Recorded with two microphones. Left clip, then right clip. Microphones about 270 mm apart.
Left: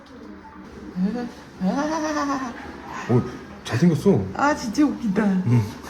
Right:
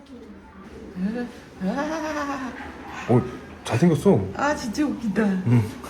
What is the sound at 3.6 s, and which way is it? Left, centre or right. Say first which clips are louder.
Speech: right 1 dB; centre.